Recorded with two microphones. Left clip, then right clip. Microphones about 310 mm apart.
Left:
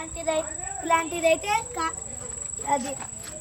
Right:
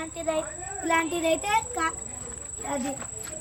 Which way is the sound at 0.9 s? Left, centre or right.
Centre.